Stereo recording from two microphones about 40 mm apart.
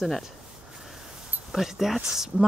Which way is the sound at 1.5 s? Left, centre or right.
Centre.